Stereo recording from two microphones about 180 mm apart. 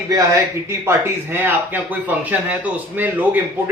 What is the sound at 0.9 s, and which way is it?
Speech, 10° right (ahead or behind).